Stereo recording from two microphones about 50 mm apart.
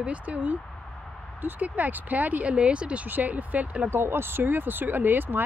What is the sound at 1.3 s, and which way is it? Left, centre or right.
Speech, right.